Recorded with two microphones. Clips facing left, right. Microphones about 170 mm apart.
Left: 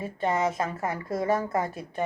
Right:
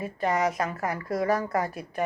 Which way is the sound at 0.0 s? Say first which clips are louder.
Even; 25° left (ahead or behind).